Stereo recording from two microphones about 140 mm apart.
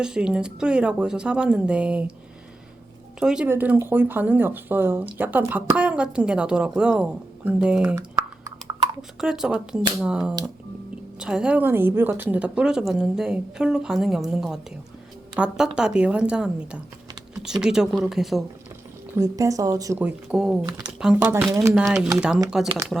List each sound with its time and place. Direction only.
0.0 s speech: 5° right (ahead or behind)
3.2 s a woman's voice: 5° right (ahead or behind)
9.0 s a woman's voice: 5° right (ahead or behind)
19.1 s speech: 25° right (ahead or behind)
20.2 s a woman's voice: 5° right (ahead or behind)
20.7 s speech: 30° right (ahead or behind)
21.2 s speech: 15° right (ahead or behind)
21.9 s a woman's voice: 5° right (ahead or behind)